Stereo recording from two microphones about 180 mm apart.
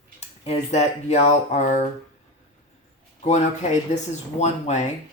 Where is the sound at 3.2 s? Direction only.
40° left (ahead or behind).